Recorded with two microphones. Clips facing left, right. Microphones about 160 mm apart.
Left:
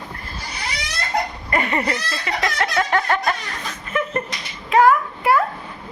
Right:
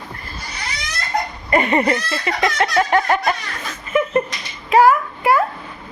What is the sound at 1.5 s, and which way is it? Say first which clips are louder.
Laughter: right 8 dB; 20° right (ahead or behind).